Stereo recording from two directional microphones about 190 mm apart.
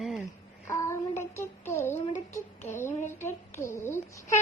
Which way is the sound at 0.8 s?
15° left (ahead or behind).